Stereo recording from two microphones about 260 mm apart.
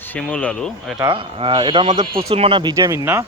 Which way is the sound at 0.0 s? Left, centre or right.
Centre.